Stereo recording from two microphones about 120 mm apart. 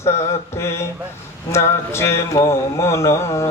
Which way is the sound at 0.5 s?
20° left (ahead or behind).